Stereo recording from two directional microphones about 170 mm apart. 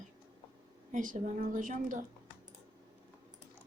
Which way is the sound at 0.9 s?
50° right (ahead or behind).